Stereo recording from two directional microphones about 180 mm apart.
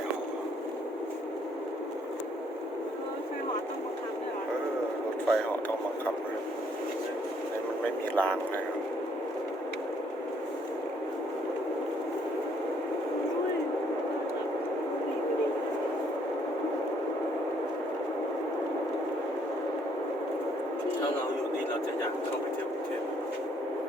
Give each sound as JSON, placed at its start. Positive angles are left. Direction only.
{"t": 5.3, "sound": "speech", "side_deg": 10}
{"t": 8.1, "sound": "speech", "side_deg": 10}